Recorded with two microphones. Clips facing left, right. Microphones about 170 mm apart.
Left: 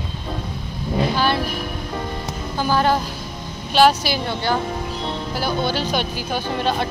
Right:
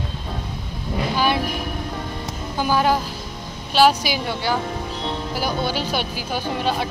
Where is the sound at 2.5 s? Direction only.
10° right (ahead or behind).